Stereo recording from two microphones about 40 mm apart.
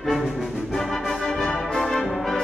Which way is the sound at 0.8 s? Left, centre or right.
Centre.